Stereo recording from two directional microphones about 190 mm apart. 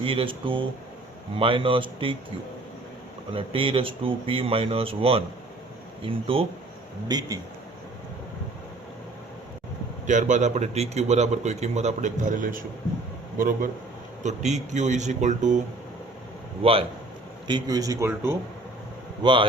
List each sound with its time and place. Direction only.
0.0 s speech: 30° right (ahead or behind)
3.3 s speech: 30° right (ahead or behind)
10.1 s speech: 40° right (ahead or behind)
14.3 s speech: 35° right (ahead or behind)
16.6 s speech: 30° right (ahead or behind); by 18.3 s 15° right (ahead or behind)
19.2 s speech: 25° right (ahead or behind)